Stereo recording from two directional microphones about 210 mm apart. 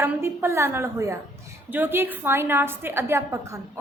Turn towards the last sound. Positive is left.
turn(degrees=-15)  # may be behind; listen again after turning